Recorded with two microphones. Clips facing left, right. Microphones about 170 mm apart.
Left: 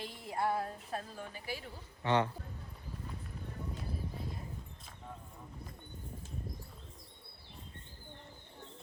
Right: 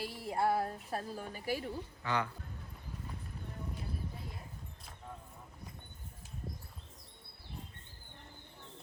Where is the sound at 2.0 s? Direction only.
30° left (ahead or behind).